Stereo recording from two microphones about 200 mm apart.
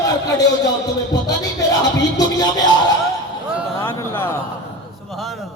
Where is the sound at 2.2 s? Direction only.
20° left (ahead or behind).